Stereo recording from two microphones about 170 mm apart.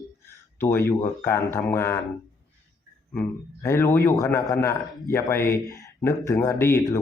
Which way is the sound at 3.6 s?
15° left (ahead or behind).